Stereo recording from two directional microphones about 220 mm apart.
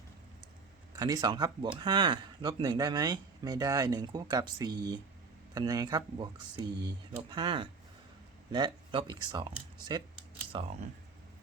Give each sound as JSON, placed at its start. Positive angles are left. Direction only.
{"t": 0.9, "sound": "speech", "side_deg": -15}